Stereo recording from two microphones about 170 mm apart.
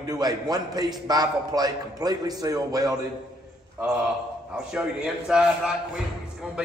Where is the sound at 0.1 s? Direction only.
25° right (ahead or behind).